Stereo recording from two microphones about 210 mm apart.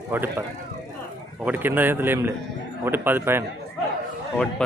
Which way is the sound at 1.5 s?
10° right (ahead or behind).